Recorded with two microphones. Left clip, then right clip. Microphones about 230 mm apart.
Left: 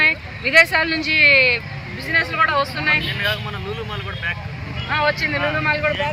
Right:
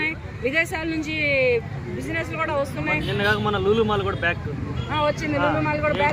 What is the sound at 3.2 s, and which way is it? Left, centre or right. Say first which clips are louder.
Speech: right 2 dB; right.